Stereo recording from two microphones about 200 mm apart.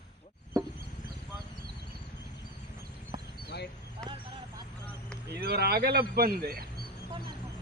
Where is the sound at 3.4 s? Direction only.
55° left (ahead or behind).